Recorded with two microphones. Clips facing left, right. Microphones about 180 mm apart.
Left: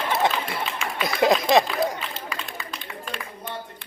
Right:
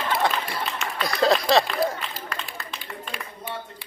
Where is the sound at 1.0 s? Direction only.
20° left (ahead or behind).